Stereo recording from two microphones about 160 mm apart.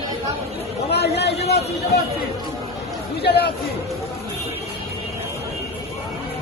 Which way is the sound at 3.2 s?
90° left.